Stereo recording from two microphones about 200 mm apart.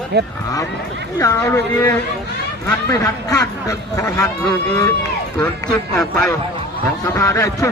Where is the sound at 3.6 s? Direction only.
15° left (ahead or behind).